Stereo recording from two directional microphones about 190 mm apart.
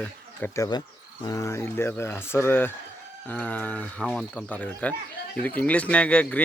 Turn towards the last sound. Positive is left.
turn(degrees=5)  # may be behind; listen again after turning